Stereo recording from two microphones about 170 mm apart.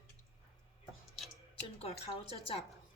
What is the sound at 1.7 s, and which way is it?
Speech, 35° left (ahead or behind).